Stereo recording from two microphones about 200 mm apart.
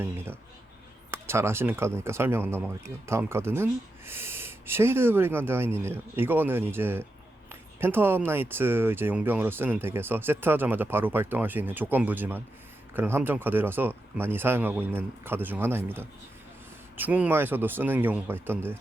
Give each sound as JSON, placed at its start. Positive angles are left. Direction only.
{"t": 1.1, "sound": "speech", "side_deg": -10}
{"t": 17.0, "sound": "speech", "side_deg": -10}